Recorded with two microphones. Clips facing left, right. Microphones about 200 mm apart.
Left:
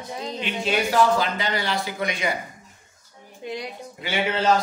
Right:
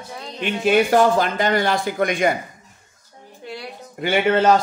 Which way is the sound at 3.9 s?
55° right (ahead or behind).